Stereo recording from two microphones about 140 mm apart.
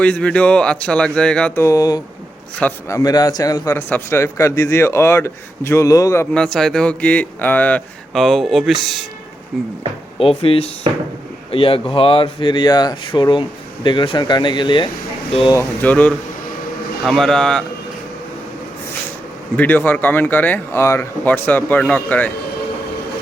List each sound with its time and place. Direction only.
0.0 s speech: 10° left (ahead or behind)
1.5 s a man's voice: 25° left (ahead or behind)
3.8 s a man's voice: 15° left (ahead or behind)
6.3 s speech: 5° left (ahead or behind)
8.1 s speech: centre (ahead or behind)
10.2 s speech: 40° left (ahead or behind)
15.8 s speech: 10° left (ahead or behind)
19.5 s speech: 10° left (ahead or behind)